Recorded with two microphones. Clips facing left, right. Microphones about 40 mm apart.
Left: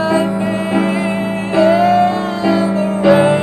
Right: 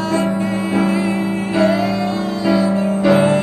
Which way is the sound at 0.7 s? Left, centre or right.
Left.